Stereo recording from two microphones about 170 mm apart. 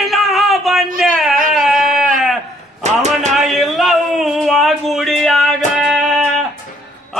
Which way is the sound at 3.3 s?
Centre (ahead or behind).